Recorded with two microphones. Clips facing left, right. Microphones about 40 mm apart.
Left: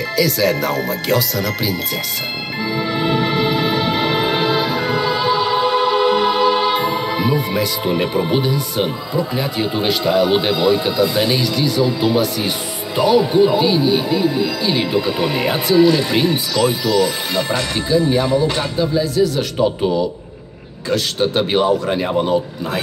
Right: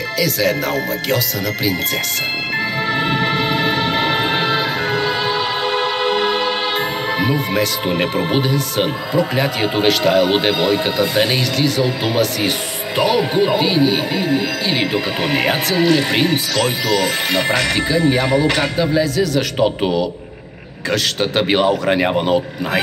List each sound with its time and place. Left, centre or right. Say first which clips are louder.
0.2 s speech: left 1 dB; right
2.9 s music: even; right
7.8 s speech: even; right
20.9 s speech: left 1 dB; right